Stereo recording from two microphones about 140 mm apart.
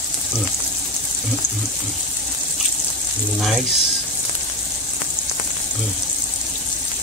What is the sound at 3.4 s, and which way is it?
Speech, centre (ahead or behind).